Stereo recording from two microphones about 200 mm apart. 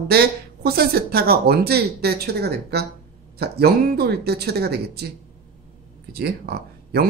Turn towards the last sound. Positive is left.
turn(degrees=-50)  # may be behind; listen again after turning